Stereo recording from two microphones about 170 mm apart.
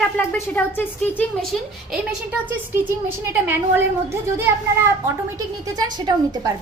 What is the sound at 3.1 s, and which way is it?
A woman's voice, 15° right (ahead or behind).